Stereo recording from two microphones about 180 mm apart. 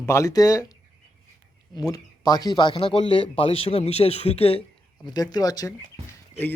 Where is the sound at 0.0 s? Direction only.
15° left (ahead or behind).